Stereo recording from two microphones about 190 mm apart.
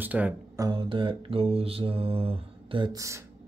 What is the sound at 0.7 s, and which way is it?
Mantra, 25° right (ahead or behind).